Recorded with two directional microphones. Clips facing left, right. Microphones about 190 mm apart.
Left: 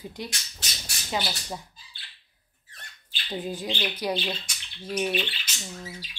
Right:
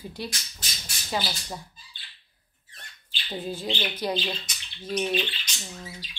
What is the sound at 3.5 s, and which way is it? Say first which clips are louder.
Speech: right 2 dB; 15° left (ahead or behind).